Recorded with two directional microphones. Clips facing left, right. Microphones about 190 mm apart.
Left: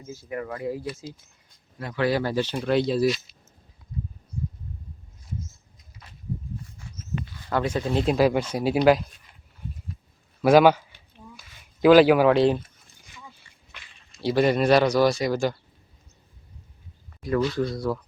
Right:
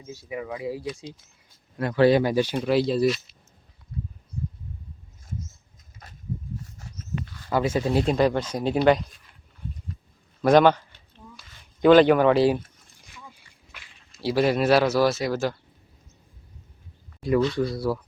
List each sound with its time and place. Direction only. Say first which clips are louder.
0.1 s speech: even; 5° right (ahead or behind)
2.0 s speech: right 5 dB; 20° right (ahead or behind)
2.6 s speech: left 2 dB; centre (ahead or behind)
6.0 s a sound: right 3 dB; 45° right (ahead or behind)
6.8 s dog: even; 40° right (ahead or behind)
7.5 s speech: right 2 dB; 5° right (ahead or behind)
10.4 s a sound: left 1 dB; 5° left (ahead or behind)
13.7 s speech: left 1 dB; 5° right (ahead or behind)
17.4 s speech: right 1 dB; centre (ahead or behind)